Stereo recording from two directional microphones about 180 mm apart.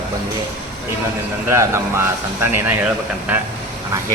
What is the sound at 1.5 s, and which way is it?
Speech, 15° right (ahead or behind).